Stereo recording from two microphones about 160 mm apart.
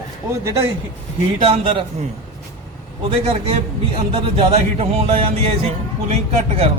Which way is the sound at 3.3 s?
40° right (ahead or behind).